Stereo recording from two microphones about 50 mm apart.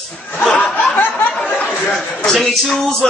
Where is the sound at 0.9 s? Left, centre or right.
Left.